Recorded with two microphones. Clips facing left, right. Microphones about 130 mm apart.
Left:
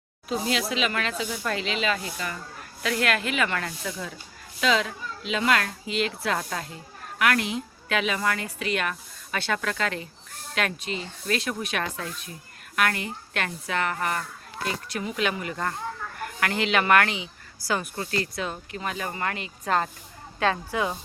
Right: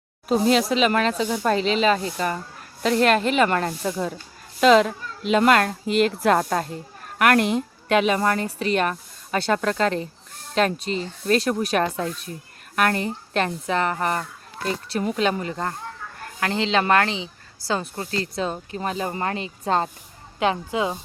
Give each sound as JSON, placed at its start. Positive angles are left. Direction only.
{"t": 0.3, "sound": "a woman's voice", "side_deg": -40}